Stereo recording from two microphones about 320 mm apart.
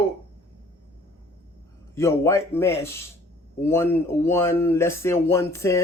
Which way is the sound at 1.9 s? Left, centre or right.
Centre.